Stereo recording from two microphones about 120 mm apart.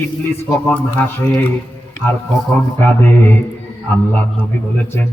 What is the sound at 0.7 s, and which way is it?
Speech, 15° left (ahead or behind).